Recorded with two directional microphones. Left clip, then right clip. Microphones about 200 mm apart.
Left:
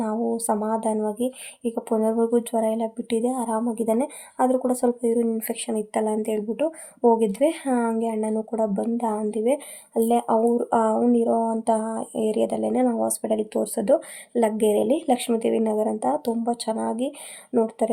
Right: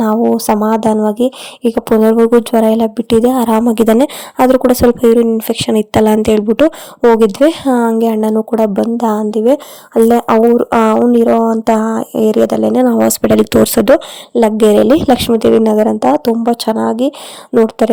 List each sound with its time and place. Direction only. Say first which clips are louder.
0.0 s speech: right 13 dB; 45° right (ahead or behind)